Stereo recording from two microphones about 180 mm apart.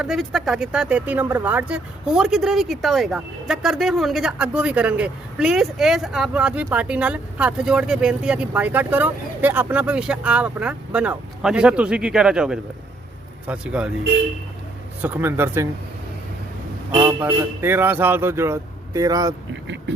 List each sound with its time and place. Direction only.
0.0 s speech: centre (ahead or behind)
15.0 s a man's voice: 10° right (ahead or behind)
16.9 s a man's voice: 25° right (ahead or behind)
17.2 s a man's voice: 10° right (ahead or behind)